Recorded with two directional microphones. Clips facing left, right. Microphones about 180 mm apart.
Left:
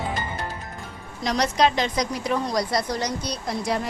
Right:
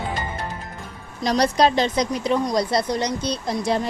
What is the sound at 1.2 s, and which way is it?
Speech, 35° right (ahead or behind).